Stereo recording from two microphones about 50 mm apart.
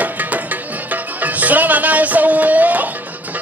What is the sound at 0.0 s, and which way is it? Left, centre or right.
Music, right.